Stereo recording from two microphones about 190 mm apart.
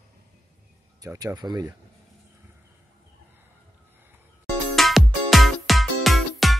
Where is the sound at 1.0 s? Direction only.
15° right (ahead or behind).